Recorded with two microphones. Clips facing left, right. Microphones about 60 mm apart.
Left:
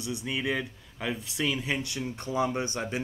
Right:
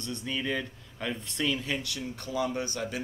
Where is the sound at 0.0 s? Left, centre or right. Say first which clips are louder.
Left 2 dB; centre.